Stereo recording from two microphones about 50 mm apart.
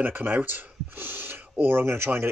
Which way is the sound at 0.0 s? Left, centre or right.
Right.